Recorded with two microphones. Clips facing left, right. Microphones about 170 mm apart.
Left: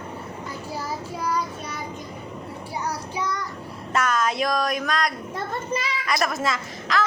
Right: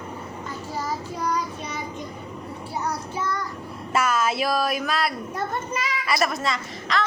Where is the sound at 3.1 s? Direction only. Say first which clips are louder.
Left 1 dB; 50° right (ahead or behind).